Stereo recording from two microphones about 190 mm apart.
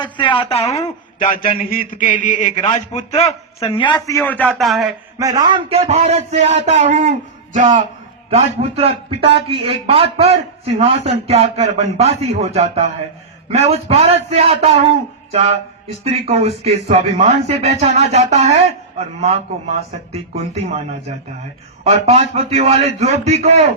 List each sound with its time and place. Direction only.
0.0 s a man's voice: 25° left (ahead or behind)
1.2 s a man's voice: 45° left (ahead or behind); by 4.2 s 20° left (ahead or behind)
4.2 s a man's voice: 5° left (ahead or behind)
5.2 s speech: 20° right (ahead or behind); by 20.8 s 35° right (ahead or behind)
22.0 s speech: 35° right (ahead or behind)